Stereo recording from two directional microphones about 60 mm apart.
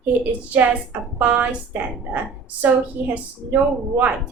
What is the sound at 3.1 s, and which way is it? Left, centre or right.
A woman's voice, right.